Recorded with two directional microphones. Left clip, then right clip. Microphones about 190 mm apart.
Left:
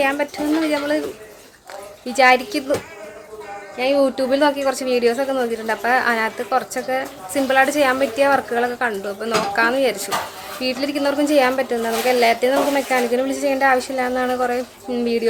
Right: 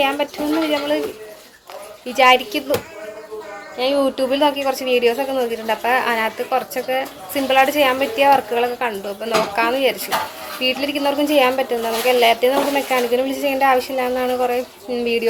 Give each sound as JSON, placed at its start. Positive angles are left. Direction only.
{"t": 0.0, "sound": "a woman's voice", "side_deg": 10}
{"t": 2.1, "sound": "a woman's voice", "side_deg": 15}
{"t": 3.8, "sound": "a woman's voice", "side_deg": 15}